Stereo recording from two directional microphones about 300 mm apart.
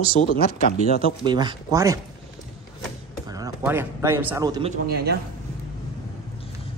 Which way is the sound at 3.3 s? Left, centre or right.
Centre.